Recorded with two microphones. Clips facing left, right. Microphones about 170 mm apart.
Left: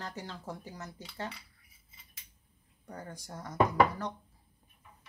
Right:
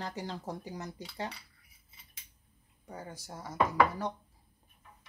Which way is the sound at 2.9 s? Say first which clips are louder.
Even; 5° right (ahead or behind).